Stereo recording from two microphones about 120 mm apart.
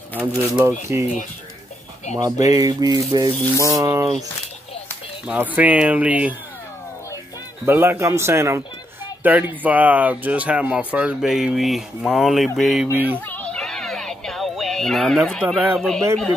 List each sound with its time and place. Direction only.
0.1 s speech: 15° left (ahead or behind)
0.5 s a man's voice: 25° right (ahead or behind)
2.1 s speech: 30° right (ahead or behind)
3.5 s a man's voice: 25° right (ahead or behind)
5.2 s speech: 15° right (ahead or behind)
7.6 s a man's voice: 20° right (ahead or behind); by 12.8 s centre (ahead or behind)
12.8 s speech: 15° right (ahead or behind)
13.3 s music: 10° left (ahead or behind)
15.7 s speech: 5° left (ahead or behind)